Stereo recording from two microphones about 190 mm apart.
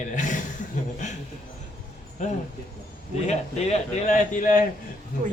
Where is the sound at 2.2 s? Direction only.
40° left (ahead or behind).